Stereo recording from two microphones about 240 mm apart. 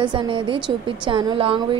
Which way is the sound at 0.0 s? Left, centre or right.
Centre.